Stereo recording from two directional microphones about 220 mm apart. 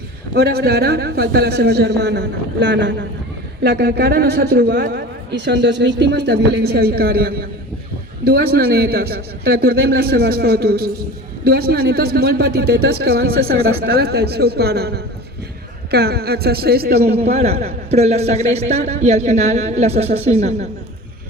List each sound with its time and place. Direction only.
0.3 s speech: 45° right (ahead or behind)
17.2 s a man's voice: 30° right (ahead or behind)